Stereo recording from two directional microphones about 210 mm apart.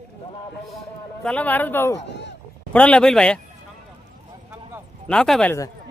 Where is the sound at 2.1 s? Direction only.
55° left (ahead or behind).